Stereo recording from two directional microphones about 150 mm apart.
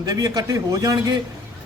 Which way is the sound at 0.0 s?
25° right (ahead or behind).